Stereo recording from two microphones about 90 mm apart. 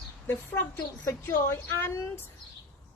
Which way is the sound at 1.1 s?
30° left (ahead or behind).